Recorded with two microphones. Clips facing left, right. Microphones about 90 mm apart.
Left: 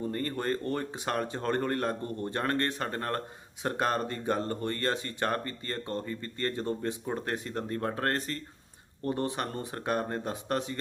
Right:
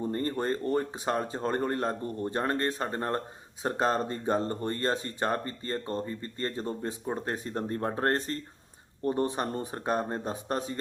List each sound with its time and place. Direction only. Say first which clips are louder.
0.0 s speech: right 2 dB; 25° right (ahead or behind)